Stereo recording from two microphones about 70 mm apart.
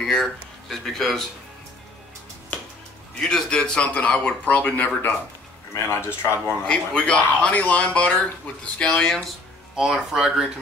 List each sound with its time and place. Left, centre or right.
0.0 s speech: centre
3.2 s speech: centre
5.9 s speech: left
6.7 s speech: centre
9.8 s speech: centre